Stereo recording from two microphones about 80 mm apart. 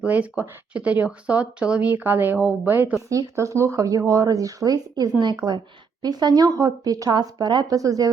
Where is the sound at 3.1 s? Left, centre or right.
Right.